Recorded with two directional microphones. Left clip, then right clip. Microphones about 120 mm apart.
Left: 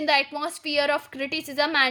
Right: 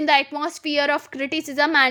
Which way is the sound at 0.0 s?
50° right (ahead or behind).